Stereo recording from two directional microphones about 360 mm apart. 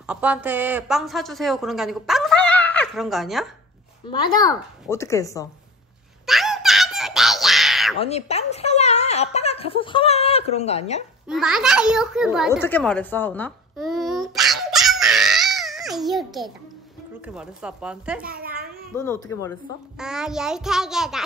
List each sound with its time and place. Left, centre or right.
0.0 s a woman's voice: centre
4.1 s speech: centre
6.2 s a sound: centre
8.0 s speech: centre
11.2 s a child's voice: centre
18.2 s a child's voice: right
20.0 s a woman's voice: centre